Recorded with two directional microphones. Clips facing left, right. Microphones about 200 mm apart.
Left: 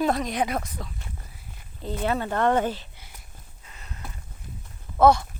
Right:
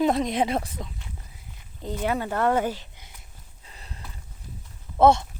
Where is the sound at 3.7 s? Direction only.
30° right (ahead or behind).